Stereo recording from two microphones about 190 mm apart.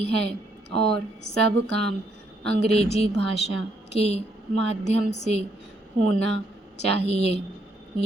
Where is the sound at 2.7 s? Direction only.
30° left (ahead or behind).